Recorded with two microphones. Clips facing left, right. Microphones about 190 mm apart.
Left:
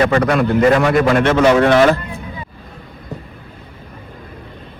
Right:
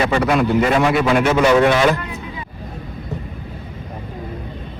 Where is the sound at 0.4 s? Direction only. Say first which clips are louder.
Left 3 dB; 55° left (ahead or behind).